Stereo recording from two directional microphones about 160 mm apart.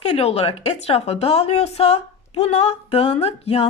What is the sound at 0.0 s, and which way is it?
A woman's voice, 40° left (ahead or behind).